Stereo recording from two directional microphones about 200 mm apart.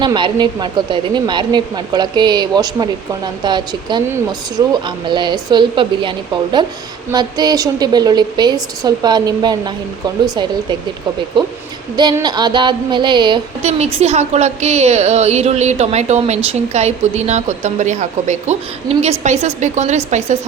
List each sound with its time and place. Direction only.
0.0 s a woman's voice: 20° right (ahead or behind)